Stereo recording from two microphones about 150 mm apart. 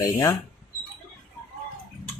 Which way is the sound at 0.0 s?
25° left (ahead or behind).